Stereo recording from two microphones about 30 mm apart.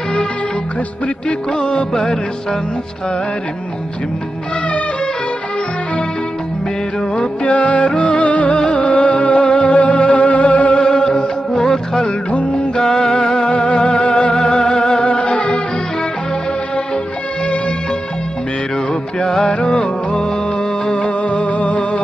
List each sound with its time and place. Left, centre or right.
1.5 s music: left
7.4 s music: left
10.8 s music: left
12.3 s music: left
12.7 s music: left
19.4 s music: left